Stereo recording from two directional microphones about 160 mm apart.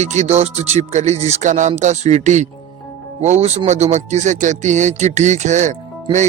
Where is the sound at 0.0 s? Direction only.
45° right (ahead or behind).